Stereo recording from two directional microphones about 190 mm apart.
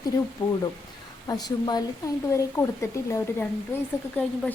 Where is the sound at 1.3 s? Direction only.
20° left (ahead or behind).